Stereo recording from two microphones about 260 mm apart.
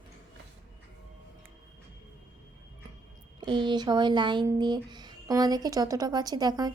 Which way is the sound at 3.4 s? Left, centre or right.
Centre.